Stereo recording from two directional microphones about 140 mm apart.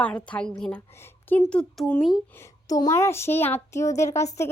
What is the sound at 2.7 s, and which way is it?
A child's voice, 25° left (ahead or behind).